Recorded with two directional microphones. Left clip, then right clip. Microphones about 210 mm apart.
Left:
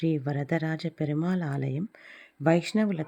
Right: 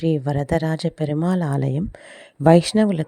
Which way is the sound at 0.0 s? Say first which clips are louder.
Right 7 dB; 40° right (ahead or behind).